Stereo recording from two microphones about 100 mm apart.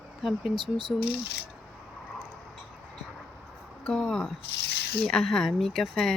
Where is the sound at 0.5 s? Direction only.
50° right (ahead or behind).